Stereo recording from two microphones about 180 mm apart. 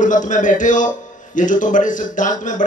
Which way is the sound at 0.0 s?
45° left (ahead or behind).